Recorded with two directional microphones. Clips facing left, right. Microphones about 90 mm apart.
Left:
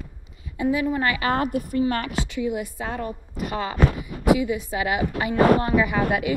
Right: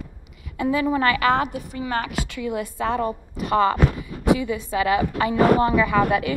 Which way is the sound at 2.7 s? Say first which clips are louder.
Right 6 dB; 90° right.